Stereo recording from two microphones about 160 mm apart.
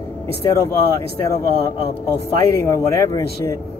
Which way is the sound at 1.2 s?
20° left (ahead or behind).